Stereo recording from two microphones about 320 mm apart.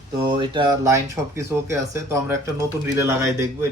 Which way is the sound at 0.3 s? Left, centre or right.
Centre.